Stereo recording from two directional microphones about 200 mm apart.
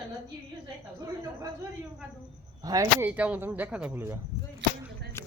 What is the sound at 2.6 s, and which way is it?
Speech, 15° right (ahead or behind).